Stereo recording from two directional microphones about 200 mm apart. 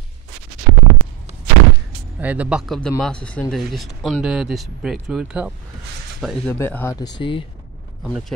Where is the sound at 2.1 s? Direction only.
5° right (ahead or behind); by 7.4 s 25° left (ahead or behind).